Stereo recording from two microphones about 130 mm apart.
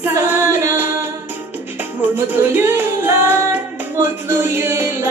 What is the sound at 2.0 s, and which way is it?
Music, 15° right (ahead or behind).